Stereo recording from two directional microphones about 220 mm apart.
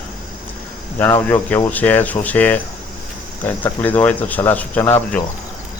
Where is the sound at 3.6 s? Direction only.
10° left (ahead or behind).